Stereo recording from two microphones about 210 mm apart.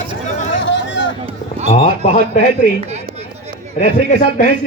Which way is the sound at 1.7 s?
35° left (ahead or behind).